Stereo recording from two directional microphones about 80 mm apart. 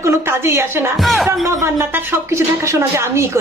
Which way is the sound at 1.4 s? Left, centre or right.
Right.